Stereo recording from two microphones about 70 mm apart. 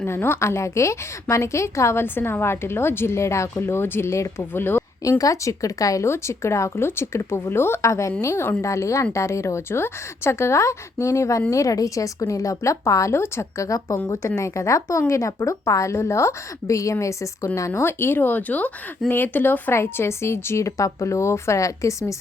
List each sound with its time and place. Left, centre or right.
0.0 s a woman's voice: left
5.0 s a woman's voice: left
6.1 s a woman's voice: left
13.7 s a woman's voice: left
14.1 s a woman's voice: left